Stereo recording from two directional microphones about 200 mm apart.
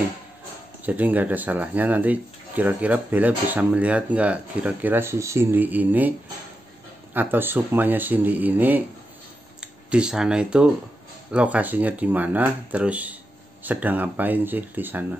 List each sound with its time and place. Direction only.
0.8 s speech: 10° right (ahead or behind)
7.2 s speech: 10° right (ahead or behind)
9.8 s speech: 5° right (ahead or behind)